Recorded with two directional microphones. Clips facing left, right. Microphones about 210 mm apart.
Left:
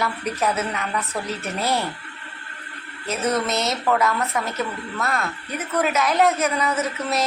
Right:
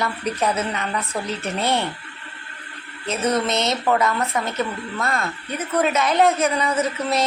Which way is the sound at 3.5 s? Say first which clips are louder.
Right 1 dB; 5° left (ahead or behind).